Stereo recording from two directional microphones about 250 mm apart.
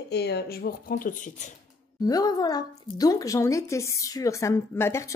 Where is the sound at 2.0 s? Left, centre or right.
Centre.